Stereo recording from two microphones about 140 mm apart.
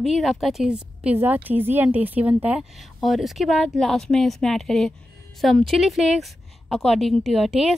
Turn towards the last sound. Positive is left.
turn(degrees=0)  # may be behind; listen again after turning